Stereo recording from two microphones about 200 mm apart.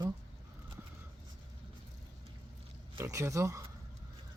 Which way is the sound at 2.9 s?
15° right (ahead or behind).